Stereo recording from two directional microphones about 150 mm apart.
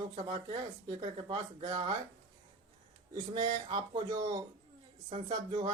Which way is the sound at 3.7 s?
30° right (ahead or behind).